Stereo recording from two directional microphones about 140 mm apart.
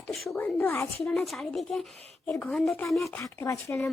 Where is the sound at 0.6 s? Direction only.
15° left (ahead or behind).